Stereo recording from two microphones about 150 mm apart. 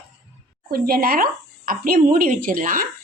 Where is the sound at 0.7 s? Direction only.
80° right.